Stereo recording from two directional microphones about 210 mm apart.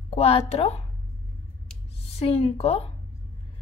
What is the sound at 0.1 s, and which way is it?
Speech, 30° left (ahead or behind).